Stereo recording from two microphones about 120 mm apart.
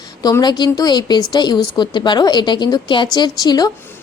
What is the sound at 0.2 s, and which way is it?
A woman's voice, 30° left (ahead or behind).